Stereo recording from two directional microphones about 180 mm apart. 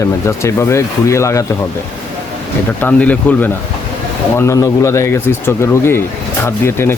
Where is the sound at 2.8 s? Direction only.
10° left (ahead or behind).